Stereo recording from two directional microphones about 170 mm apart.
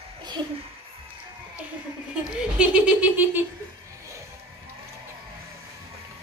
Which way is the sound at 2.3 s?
5° right (ahead or behind).